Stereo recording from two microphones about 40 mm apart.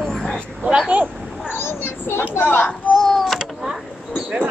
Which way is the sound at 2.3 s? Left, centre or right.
Left.